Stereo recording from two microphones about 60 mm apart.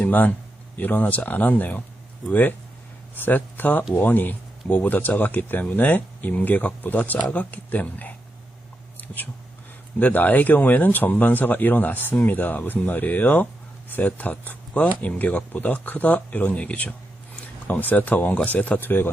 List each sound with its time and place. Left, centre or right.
0.0 s a man's voice: left
9.0 s whispering: left
10.0 s speech: left